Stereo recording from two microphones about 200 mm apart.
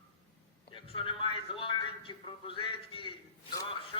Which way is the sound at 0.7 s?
25° left (ahead or behind).